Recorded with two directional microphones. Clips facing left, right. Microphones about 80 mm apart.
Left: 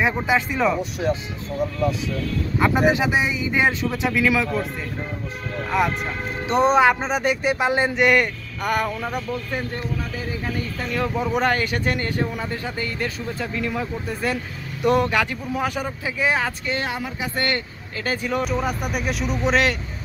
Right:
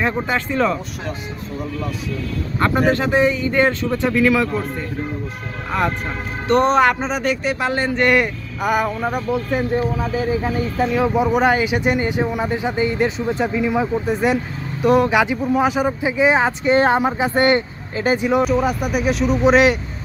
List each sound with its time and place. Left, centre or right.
0.3 s speech: centre
2.6 s speech: centre
6.5 s speech: centre
7.2 s speech: centre
8.0 s speech: centre
9.3 s speech: centre
13.5 s speech: centre
14.8 s speech: centre
15.0 s speech: centre
18.4 s speech: centre